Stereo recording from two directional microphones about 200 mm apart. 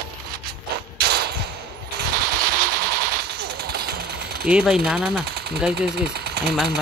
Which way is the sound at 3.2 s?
50° right (ahead or behind).